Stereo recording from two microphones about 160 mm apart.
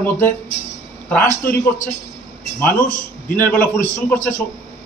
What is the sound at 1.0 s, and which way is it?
Speech, 10° left (ahead or behind).